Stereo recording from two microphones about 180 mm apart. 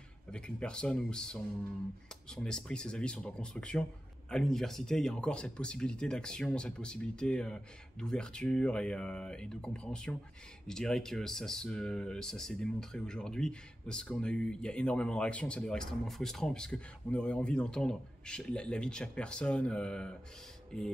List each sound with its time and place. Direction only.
0.3 s speech: 5° left (ahead or behind)